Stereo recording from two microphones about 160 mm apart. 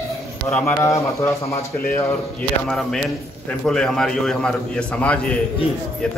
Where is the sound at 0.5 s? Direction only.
15° left (ahead or behind).